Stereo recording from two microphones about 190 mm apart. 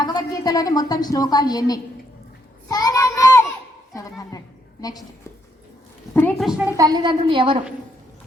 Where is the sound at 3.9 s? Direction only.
15° left (ahead or behind).